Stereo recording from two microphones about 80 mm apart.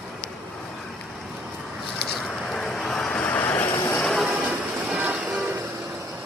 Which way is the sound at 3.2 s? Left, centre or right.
Centre.